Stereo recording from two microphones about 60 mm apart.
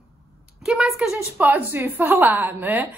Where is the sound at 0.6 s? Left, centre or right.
Centre.